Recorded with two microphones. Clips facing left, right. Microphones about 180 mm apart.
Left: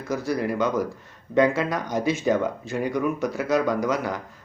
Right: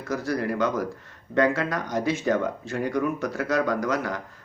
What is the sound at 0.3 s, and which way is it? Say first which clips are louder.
Speech: left 1 dB; 15° left (ahead or behind).